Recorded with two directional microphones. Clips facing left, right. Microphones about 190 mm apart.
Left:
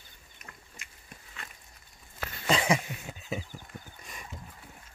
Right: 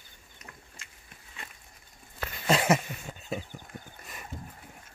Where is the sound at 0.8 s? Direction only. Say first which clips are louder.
Even; 15° left (ahead or behind).